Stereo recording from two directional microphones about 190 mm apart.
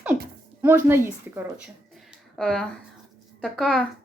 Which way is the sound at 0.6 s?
10° right (ahead or behind).